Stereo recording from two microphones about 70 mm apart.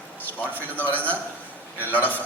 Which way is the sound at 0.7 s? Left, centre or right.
Left.